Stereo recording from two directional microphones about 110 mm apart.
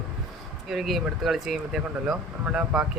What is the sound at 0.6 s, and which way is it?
Speech, centre (ahead or behind).